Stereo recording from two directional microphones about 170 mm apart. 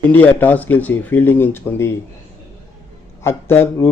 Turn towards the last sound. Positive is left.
turn(degrees=15)  # may be behind; listen again after turning